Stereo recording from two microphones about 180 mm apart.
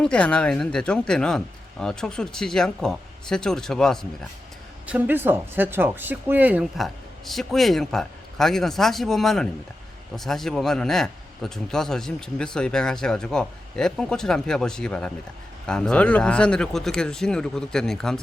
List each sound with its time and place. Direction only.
0.0 s a man's voice: 5° left (ahead or behind)
4.9 s a man's voice: 10° right (ahead or behind)